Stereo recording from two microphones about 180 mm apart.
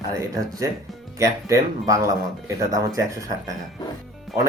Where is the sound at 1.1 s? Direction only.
20° right (ahead or behind).